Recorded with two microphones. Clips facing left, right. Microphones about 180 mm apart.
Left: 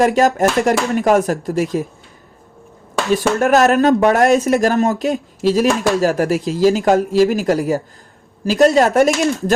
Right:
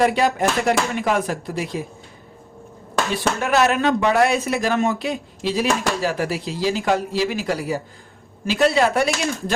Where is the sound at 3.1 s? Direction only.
45° left (ahead or behind).